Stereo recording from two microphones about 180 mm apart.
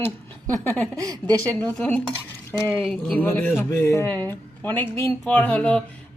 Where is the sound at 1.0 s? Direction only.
20° right (ahead or behind).